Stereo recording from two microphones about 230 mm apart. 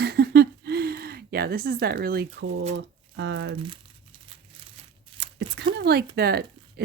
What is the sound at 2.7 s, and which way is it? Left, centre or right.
Speech, right.